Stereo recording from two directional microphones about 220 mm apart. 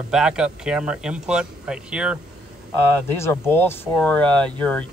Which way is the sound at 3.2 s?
10° left (ahead or behind).